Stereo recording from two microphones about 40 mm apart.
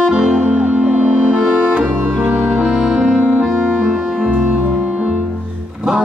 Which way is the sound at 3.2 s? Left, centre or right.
Right.